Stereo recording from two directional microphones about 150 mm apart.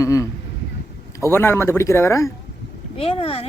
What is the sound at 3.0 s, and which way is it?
Speech, 40° left (ahead or behind).